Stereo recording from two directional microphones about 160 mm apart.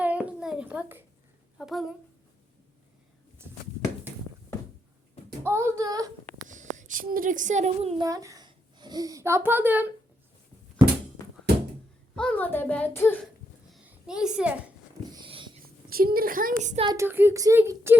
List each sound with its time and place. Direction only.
0.0 s a sound: 10° right (ahead or behind)
1.5 s speech: centre (ahead or behind)
5.4 s a child's voice: 15° right (ahead or behind)
6.5 s a woman's voice: 50° right (ahead or behind)
8.0 s a woman's voice: 20° right (ahead or behind)
12.1 s a woman's voice: 5° left (ahead or behind)
13.8 s a child's voice: 5° right (ahead or behind)
15.1 s dog: 30° right (ahead or behind)
15.6 s a woman's voice: 70° right (ahead or behind); by 16.8 s 50° right (ahead or behind)
16.8 s speech: 25° right (ahead or behind)
17.1 s speech: 15° right (ahead or behind)